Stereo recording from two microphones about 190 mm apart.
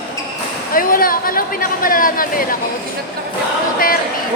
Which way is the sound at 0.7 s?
50° left (ahead or behind).